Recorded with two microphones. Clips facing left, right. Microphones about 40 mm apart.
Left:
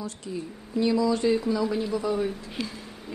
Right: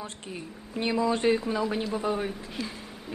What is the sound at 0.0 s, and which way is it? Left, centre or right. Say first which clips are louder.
Speech: left 4 dB; right.